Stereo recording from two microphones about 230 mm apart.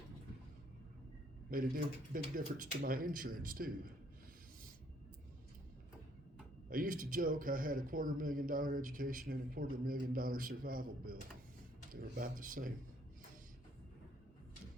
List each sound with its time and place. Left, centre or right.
1.5 s a man's voice: right
6.7 s a man's voice: right